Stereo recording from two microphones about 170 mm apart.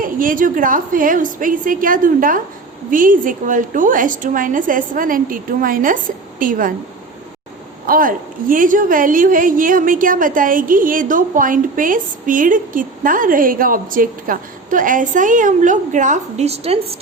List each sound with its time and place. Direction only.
0.0 s a woman's voice: 55° right (ahead or behind)
7.9 s a woman's voice: 55° right (ahead or behind); by 16.7 s 40° right (ahead or behind)